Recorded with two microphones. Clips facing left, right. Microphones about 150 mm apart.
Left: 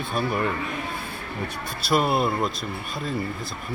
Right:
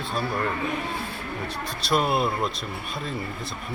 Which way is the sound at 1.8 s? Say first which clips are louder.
Left 1 dB; 5° left (ahead or behind).